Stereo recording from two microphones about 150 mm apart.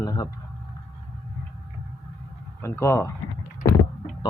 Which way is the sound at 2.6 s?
15° left (ahead or behind).